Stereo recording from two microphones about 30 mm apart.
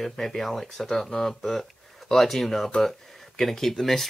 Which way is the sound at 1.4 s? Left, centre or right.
Centre.